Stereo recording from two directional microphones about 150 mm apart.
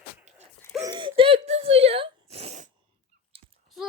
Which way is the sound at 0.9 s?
35° right (ahead or behind).